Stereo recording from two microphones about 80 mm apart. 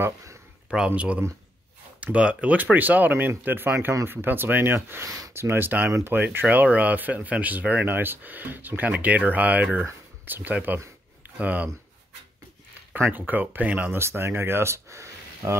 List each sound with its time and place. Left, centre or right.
0.0 s a sound: right
0.7 s speech: centre
12.9 s speech: right
13.9 s speech: right